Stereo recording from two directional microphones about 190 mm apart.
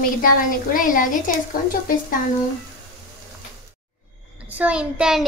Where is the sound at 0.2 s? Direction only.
45° left (ahead or behind).